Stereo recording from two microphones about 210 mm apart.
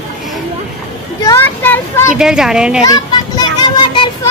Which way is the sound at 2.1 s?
5° right (ahead or behind).